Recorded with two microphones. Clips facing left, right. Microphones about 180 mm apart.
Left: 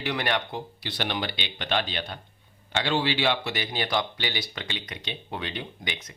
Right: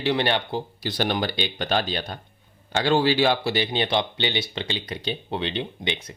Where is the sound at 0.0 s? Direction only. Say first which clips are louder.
Right 5 dB; 30° right (ahead or behind).